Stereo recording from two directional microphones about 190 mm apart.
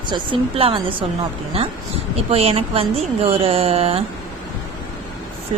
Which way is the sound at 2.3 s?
30° right (ahead or behind).